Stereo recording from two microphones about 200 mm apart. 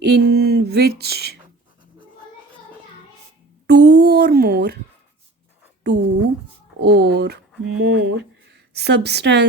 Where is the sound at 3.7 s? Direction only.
55° right (ahead or behind).